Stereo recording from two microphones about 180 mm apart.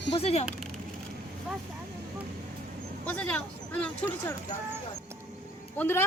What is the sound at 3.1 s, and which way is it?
Speech, 5° left (ahead or behind).